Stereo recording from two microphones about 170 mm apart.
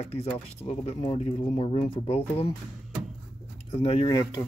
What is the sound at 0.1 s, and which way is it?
Speech, 35° left (ahead or behind).